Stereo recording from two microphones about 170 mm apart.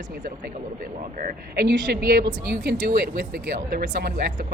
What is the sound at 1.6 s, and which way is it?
A woman's voice, 65° right (ahead or behind).